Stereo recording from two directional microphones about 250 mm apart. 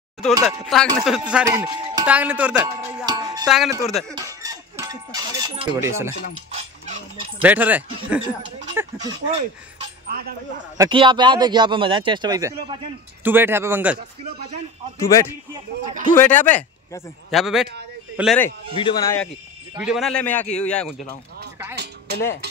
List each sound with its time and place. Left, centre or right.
0.4 s music: centre
3.4 s music: centre
4.1 s a sound: centre
7.4 s a man's voice: centre
10.8 s a man's voice: centre
15.0 s a man's voice: centre
15.8 s speech: right
16.2 s a man's voice: centre
18.8 s a man's voice: centre
19.8 s music: centre